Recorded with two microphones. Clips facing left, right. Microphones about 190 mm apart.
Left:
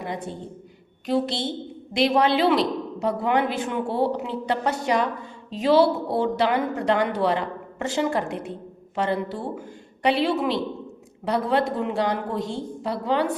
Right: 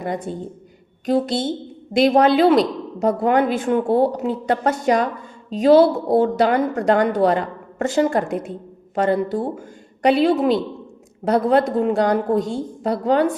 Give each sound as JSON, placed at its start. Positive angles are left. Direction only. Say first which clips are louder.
{"t": 1.0, "sound": "a woman's voice", "louder": "right 5 dB", "side_deg": -45}